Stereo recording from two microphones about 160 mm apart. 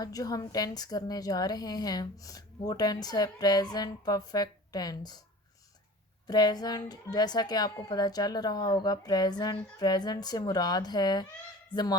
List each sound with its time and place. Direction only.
0.0 s a woman's voice: 25° left (ahead or behind)
6.2 s a woman's voice: 25° left (ahead or behind)